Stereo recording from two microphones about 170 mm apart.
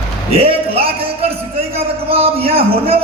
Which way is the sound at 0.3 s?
35° right (ahead or behind).